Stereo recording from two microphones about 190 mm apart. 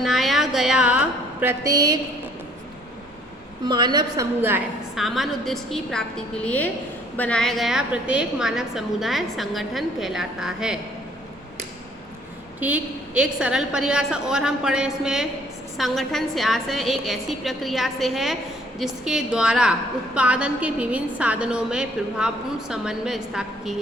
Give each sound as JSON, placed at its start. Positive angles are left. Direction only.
{"t": 0.0, "sound": "a sound", "side_deg": 0}
{"t": 3.7, "sound": "a woman's voice", "side_deg": -25}
{"t": 4.4, "sound": "a woman's voice", "side_deg": -10}
{"t": 5.0, "sound": "a woman's voice", "side_deg": 0}
{"t": 12.5, "sound": "a woman's voice", "side_deg": -10}